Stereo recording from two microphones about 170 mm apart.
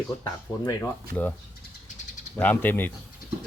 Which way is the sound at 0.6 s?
20° left (ahead or behind).